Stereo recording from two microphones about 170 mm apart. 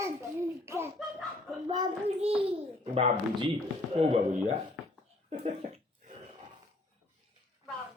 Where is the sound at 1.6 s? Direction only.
25° right (ahead or behind).